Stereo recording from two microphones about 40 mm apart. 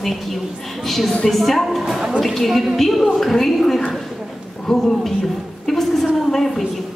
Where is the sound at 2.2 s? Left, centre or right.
Centre.